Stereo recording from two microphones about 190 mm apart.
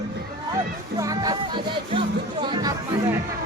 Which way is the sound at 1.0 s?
20° right (ahead or behind).